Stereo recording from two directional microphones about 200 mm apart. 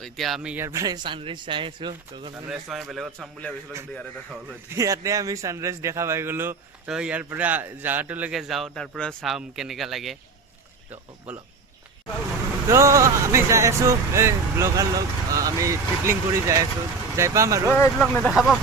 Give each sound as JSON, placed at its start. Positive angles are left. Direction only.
{"t": 0.0, "sound": "speech", "side_deg": 0}
{"t": 2.5, "sound": "a man's voice", "side_deg": 0}
{"t": 4.7, "sound": "a man's voice", "side_deg": -15}
{"t": 11.3, "sound": "a man's voice", "side_deg": -5}
{"t": 12.6, "sound": "a man's voice", "side_deg": -15}
{"t": 17.7, "sound": "a man's voice", "side_deg": 10}